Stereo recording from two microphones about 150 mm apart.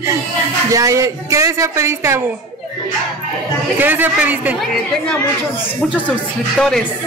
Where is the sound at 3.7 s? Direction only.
10° right (ahead or behind).